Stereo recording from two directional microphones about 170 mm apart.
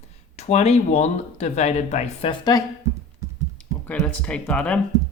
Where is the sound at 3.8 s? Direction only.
5° left (ahead or behind).